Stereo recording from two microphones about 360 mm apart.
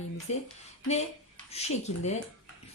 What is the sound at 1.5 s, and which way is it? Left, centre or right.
Speech, centre.